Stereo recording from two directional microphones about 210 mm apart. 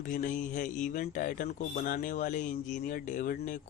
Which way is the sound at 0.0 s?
40° left (ahead or behind).